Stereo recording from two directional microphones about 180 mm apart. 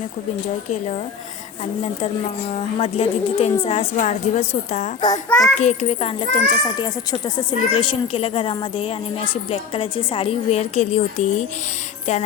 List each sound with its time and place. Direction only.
2.5 s a child's voice: 35° left (ahead or behind)